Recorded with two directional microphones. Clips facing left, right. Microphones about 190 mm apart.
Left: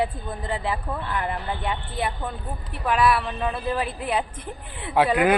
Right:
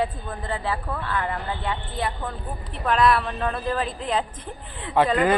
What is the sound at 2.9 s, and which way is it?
A man's voice, 5° left (ahead or behind).